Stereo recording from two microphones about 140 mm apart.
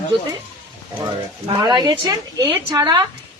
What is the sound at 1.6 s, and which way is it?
Speech, 30° right (ahead or behind).